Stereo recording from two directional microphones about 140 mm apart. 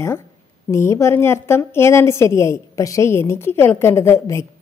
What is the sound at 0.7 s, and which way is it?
A woman's voice, 20° left (ahead or behind).